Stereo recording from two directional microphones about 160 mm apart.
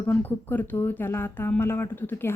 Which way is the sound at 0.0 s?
10° left (ahead or behind).